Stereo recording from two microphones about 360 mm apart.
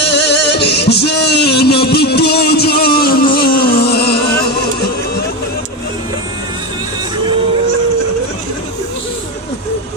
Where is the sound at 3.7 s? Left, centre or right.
Left.